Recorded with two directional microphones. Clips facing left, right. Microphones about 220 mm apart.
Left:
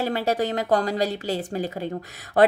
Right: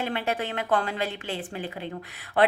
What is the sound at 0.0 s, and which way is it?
Speech, 40° left (ahead or behind).